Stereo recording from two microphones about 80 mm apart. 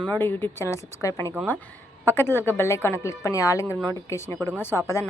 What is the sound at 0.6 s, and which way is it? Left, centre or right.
Speech, left.